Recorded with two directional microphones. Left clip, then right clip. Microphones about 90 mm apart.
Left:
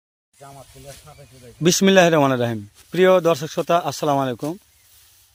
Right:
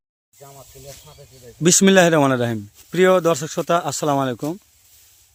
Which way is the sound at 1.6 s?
55° right (ahead or behind).